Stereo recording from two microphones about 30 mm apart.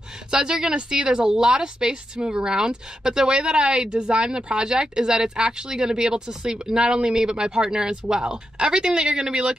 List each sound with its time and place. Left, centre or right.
0.3 s speech: right
1.2 s speech: right